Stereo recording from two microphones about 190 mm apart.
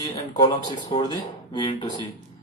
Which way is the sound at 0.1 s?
20° left (ahead or behind).